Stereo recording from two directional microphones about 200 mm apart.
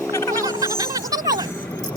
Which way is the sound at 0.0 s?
15° left (ahead or behind).